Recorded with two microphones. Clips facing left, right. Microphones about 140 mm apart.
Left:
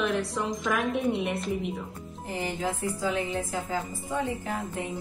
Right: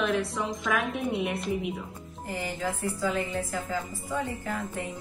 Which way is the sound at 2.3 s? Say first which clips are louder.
Left 1 dB; 15° left (ahead or behind).